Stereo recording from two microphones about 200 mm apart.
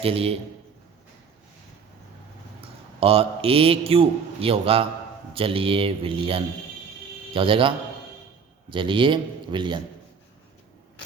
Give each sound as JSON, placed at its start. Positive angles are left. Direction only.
{"t": 0.0, "sound": "a man's voice", "side_deg": -30}
{"t": 2.6, "sound": "a man's voice", "side_deg": -30}
{"t": 8.7, "sound": "a man's voice", "side_deg": -25}